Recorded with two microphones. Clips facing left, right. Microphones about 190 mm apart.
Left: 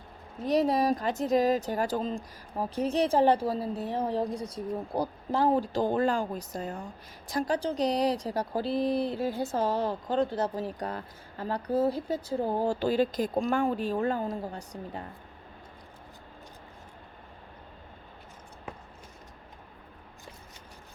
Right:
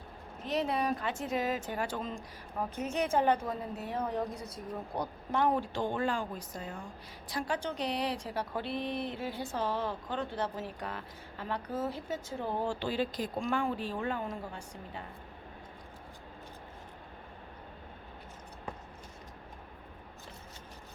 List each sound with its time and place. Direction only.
0.4 s speech: 40° left (ahead or behind)